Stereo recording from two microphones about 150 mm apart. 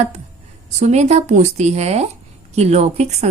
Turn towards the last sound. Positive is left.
turn(degrees=-45)  # may be behind; listen again after turning